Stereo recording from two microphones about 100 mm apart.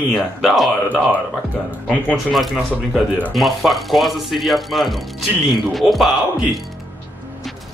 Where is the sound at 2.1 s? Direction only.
Centre (ahead or behind).